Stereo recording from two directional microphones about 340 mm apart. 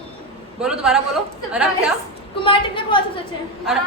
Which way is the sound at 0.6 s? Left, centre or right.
Centre.